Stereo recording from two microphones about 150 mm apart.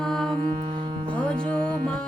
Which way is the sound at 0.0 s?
5° left (ahead or behind).